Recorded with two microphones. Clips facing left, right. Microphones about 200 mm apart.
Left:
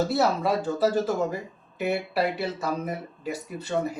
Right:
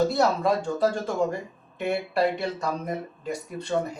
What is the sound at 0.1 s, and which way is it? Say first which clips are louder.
Speech: right 1 dB; 5° left (ahead or behind).